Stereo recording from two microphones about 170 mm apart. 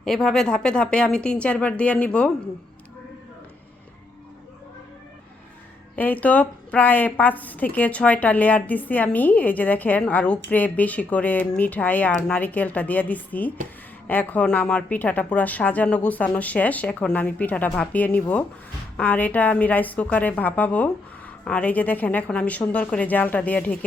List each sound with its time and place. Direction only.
0.0 s speech: centre (ahead or behind)
6.0 s a woman's voice: 10° left (ahead or behind)